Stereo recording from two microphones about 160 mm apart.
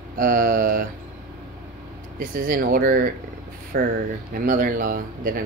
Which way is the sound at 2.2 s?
60° right (ahead or behind).